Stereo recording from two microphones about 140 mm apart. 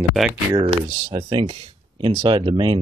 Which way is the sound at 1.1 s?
35° right (ahead or behind).